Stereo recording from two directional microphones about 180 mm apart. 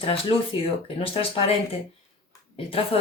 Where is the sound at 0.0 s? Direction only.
30° left (ahead or behind).